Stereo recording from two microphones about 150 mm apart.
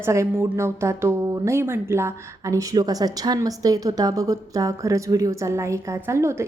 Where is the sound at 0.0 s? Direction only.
20° right (ahead or behind).